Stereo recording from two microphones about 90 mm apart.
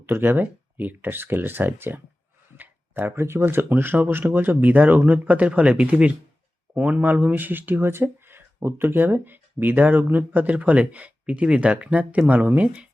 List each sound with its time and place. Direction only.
0.0 s speech: 25° right (ahead or behind)